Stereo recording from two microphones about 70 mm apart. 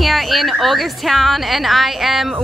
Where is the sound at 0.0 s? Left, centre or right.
Centre.